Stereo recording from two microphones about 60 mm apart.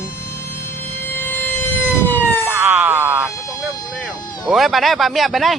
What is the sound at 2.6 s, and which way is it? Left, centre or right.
Speech, centre.